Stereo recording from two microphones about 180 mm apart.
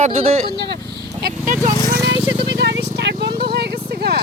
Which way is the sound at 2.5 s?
70° right (ahead or behind).